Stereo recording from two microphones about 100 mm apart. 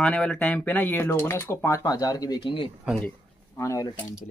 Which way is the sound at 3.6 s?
30° left (ahead or behind).